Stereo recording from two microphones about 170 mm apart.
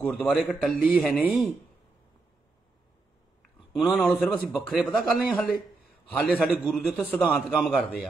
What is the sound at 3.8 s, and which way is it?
Speech, centre (ahead or behind).